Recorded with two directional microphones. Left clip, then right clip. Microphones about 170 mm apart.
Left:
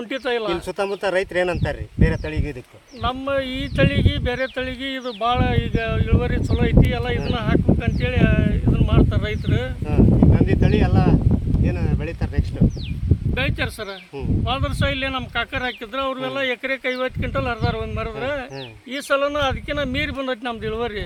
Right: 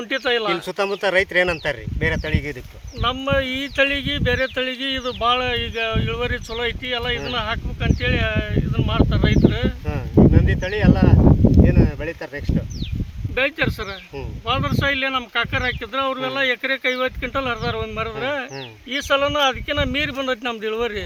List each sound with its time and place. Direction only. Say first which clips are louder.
0.1 s speech: right 3 dB; 5° left (ahead or behind)
0.8 s speech: right 3 dB; 35° left (ahead or behind)
3.0 s speech: right 2 dB; centre (ahead or behind); by 12.1 s 55° left (ahead or behind)
13.3 s speech: right 5 dB; 60° left (ahead or behind); by 18.4 s 20° left (ahead or behind)
18.9 s speech: right 1 dB; 10° left (ahead or behind)